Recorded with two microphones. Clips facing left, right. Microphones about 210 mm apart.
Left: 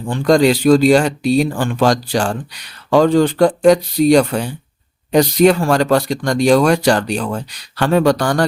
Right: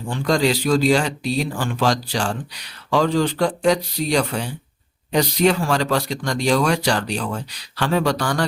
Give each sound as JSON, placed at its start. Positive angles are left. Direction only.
{"t": 0.1, "sound": "speech", "side_deg": 50}